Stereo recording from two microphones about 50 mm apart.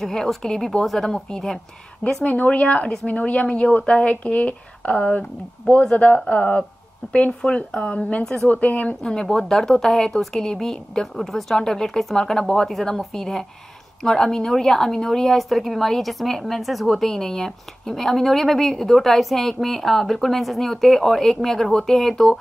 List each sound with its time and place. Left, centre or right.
0.0 s a woman's voice: centre
2.2 s speech: left
8.5 s speech: left
9.1 s a woman's voice: centre